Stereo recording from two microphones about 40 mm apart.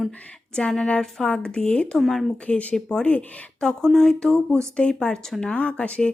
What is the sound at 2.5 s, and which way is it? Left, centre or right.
Speech, left.